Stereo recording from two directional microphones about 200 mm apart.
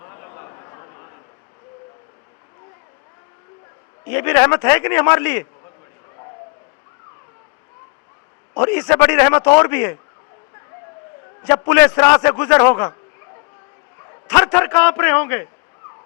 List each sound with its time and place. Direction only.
0.0 s a sound: 20° left (ahead or behind)
4.1 s a man's voice: 10° left (ahead or behind)
8.5 s a man's voice: 10° left (ahead or behind)
11.4 s a man's voice: 15° left (ahead or behind)
14.3 s a man's voice: 10° left (ahead or behind)